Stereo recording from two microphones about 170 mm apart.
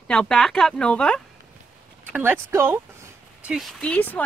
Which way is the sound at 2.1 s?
10° right (ahead or behind).